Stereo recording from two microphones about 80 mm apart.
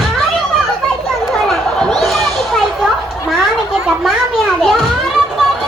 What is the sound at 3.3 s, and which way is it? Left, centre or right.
A child's voice, centre.